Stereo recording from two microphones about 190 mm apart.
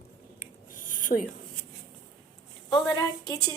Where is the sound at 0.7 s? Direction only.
45° left (ahead or behind).